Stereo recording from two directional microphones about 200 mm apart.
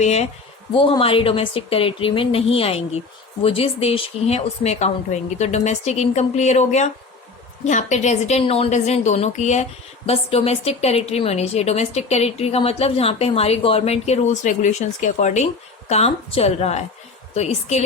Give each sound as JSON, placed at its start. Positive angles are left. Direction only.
{"t": 0.0, "sound": "a woman's voice", "side_deg": 35}